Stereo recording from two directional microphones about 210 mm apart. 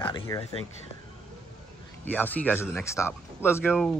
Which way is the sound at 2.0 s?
10° left (ahead or behind).